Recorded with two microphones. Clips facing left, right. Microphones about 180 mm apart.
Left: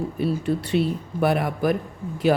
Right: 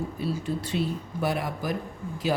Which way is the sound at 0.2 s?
65° left (ahead or behind).